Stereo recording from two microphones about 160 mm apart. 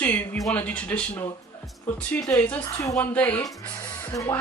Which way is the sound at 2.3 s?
10° left (ahead or behind).